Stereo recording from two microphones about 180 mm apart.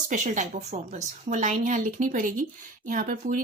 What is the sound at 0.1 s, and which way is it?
A woman's voice, 45° right (ahead or behind).